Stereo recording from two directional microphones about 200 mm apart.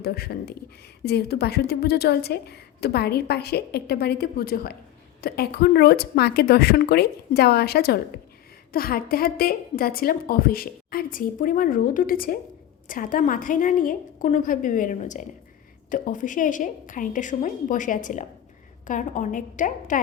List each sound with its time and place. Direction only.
0.0 s a woman's voice: 50° left (ahead or behind)